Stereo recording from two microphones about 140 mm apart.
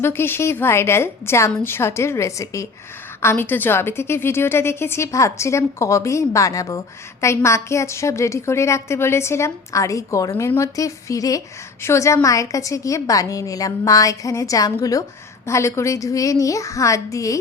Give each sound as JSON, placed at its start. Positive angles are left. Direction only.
{"t": 0.0, "sound": "a woman's voice", "side_deg": 15}